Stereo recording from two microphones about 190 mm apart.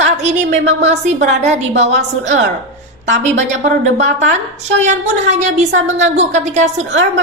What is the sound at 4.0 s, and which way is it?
A woman's voice, 40° right (ahead or behind).